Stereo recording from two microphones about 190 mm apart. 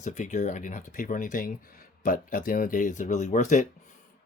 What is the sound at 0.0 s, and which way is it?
Speech, 40° left (ahead or behind).